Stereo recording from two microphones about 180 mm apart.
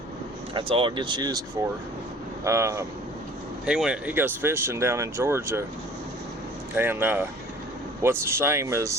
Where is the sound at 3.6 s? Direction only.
5° right (ahead or behind).